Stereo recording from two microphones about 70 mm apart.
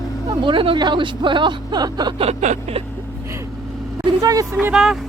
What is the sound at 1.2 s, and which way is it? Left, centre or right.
Speech, right.